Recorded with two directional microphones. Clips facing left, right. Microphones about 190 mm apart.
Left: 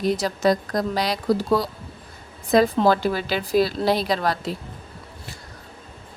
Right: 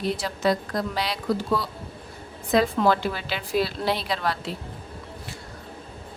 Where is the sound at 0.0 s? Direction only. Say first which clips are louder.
Left 4 dB; 40° left (ahead or behind).